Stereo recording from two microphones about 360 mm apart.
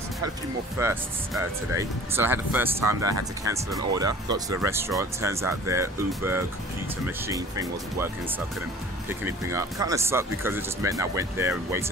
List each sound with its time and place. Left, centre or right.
0.7 s speech: centre
9.2 s speech: centre